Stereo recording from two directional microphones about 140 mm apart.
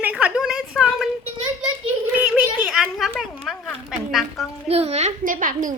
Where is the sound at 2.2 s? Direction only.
5° right (ahead or behind).